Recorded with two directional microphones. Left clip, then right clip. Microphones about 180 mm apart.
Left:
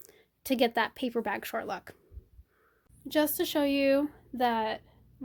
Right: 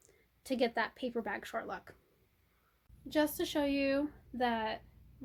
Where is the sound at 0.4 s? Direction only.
55° left (ahead or behind).